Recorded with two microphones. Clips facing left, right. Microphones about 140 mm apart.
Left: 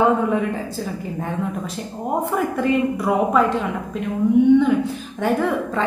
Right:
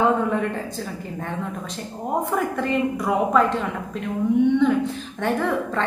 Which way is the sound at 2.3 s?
5° left (ahead or behind).